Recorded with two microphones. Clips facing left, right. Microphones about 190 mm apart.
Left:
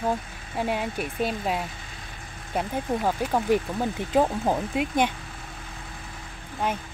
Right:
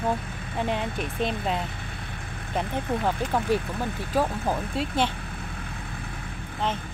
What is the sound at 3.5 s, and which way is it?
Speech, 15° left (ahead or behind).